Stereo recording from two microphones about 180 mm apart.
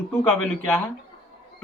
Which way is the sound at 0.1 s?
10° left (ahead or behind).